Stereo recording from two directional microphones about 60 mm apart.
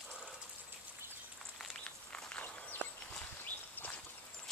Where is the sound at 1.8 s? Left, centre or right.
Centre.